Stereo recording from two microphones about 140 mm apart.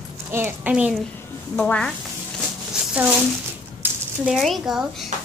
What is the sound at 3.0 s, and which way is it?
Speech, 10° right (ahead or behind).